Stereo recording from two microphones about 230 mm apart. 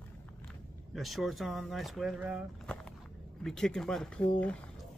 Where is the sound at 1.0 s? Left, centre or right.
Centre.